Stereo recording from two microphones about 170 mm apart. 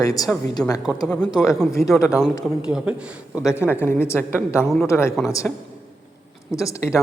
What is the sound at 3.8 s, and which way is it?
A woman's voice, 15° left (ahead or behind).